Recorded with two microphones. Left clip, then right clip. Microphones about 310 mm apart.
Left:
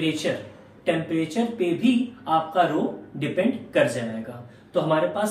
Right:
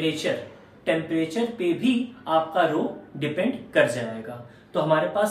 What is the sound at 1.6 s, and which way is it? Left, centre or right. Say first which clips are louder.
Speech: left 3 dB; centre.